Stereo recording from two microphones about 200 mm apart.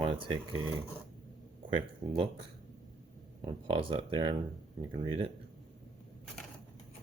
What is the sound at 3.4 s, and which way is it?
Speech, 25° right (ahead or behind).